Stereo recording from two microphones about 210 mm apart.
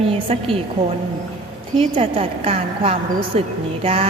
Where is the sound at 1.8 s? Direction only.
25° right (ahead or behind).